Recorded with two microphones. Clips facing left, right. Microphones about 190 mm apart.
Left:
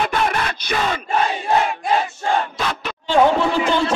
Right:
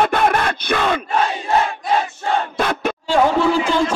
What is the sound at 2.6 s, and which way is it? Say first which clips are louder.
Crowd: right 5 dB; 50° right (ahead or behind).